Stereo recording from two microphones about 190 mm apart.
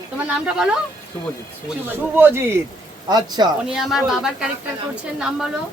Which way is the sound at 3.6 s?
Centre (ahead or behind).